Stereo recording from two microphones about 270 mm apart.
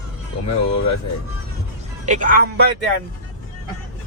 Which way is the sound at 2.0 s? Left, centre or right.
Right.